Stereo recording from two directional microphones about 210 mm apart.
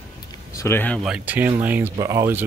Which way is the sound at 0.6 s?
10° left (ahead or behind).